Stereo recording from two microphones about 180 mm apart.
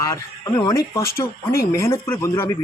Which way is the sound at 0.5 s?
20° left (ahead or behind).